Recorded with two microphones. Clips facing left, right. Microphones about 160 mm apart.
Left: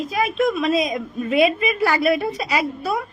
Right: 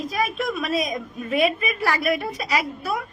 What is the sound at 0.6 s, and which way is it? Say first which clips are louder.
A woman's voice: left 5 dB; 30° left (ahead or behind).